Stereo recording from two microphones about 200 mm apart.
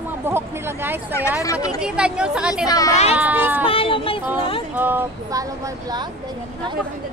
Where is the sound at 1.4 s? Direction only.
15° left (ahead or behind).